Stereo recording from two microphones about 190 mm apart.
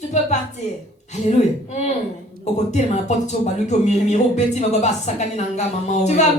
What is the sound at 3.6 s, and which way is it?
Speech, 35° left (ahead or behind).